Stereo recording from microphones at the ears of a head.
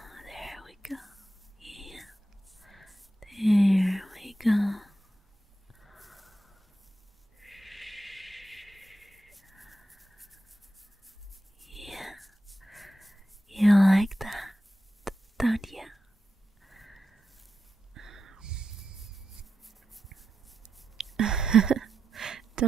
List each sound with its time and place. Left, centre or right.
0.1 s whispering: centre
7.3 s a sound: centre
11.6 s whispering: centre
16.6 s sniff: centre
17.9 s dog: right
21.2 s a sound: right